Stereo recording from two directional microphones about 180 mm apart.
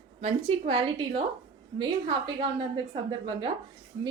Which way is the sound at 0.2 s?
35° right (ahead or behind).